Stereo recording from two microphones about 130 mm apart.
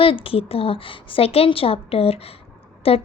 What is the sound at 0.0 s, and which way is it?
Speech, 45° left (ahead or behind).